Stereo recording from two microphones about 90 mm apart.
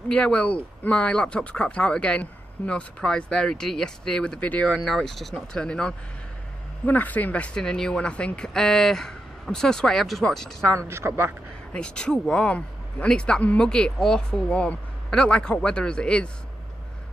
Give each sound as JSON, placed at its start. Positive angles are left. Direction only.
{"t": 0.1, "sound": "speech", "side_deg": 10}
{"t": 10.9, "sound": "a woman's voice", "side_deg": -30}
{"t": 11.7, "sound": "speech", "side_deg": 10}